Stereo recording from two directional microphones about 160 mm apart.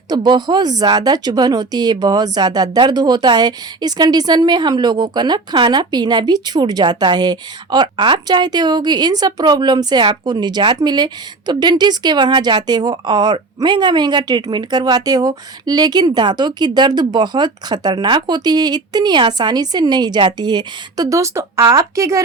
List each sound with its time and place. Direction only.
0.1 s speech: 25° right (ahead or behind)